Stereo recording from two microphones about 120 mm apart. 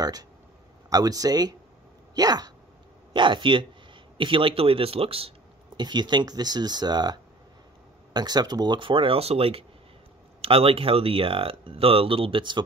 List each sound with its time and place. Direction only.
0.0 s speech: 30° right (ahead or behind); by 5.3 s 55° right (ahead or behind)
5.8 s speech: 40° right (ahead or behind)